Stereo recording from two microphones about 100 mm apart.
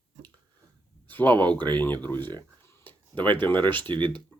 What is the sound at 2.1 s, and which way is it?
Speech, 50° right (ahead or behind).